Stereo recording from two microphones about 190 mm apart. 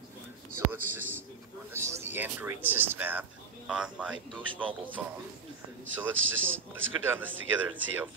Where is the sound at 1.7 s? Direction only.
15° right (ahead or behind).